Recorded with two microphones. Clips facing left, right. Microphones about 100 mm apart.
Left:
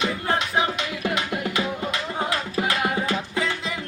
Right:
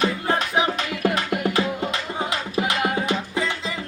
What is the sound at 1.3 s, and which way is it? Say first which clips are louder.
Music: right 3 dB; 25° right (ahead or behind).